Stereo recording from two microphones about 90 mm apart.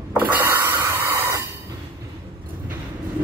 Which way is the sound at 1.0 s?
30° right (ahead or behind).